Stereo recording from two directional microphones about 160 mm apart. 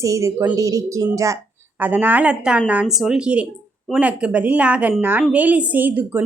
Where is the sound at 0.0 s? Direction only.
20° right (ahead or behind).